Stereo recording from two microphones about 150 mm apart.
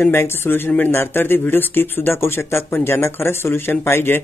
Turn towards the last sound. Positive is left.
turn(degrees=15)  # may be behind; listen again after turning